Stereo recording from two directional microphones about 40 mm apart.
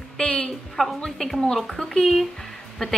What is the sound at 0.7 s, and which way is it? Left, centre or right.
A woman's voice, centre.